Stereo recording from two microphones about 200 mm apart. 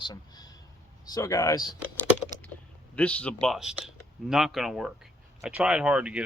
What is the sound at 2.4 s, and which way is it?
Speech, 5° left (ahead or behind).